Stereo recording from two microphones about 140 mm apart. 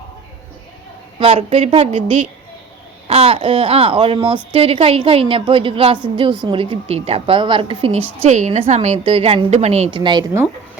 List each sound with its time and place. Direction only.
1.2 s a woman's voice: 45° right (ahead or behind)
8.2 s a woman's voice: 55° right (ahead or behind)
9.9 s a woman's voice: 35° right (ahead or behind)